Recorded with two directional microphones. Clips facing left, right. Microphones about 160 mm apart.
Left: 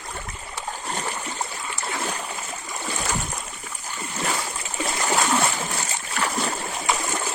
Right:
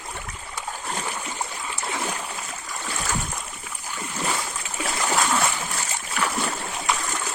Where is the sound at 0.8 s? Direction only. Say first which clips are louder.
Left 1 dB; 10° left (ahead or behind).